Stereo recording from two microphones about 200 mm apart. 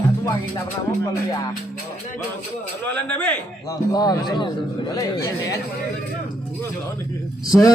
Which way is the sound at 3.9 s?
20° left (ahead or behind).